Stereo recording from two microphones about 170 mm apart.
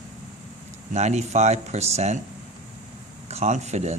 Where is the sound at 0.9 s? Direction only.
40° right (ahead or behind).